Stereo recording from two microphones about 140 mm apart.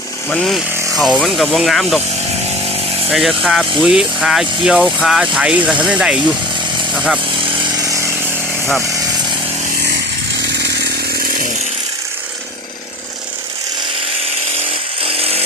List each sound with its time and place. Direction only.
0.3 s speech: 5° left (ahead or behind)
3.1 s speech: centre (ahead or behind)
7.6 s chainsaw: 25° right (ahead or behind)
15.0 s chainsaw: 45° right (ahead or behind)